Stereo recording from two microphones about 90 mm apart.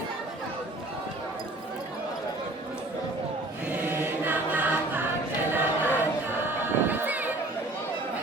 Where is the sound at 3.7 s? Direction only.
20° right (ahead or behind).